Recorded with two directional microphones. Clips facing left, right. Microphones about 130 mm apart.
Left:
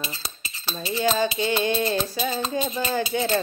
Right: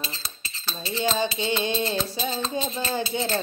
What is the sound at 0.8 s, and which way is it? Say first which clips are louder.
Music: left 3 dB; 10° left (ahead or behind).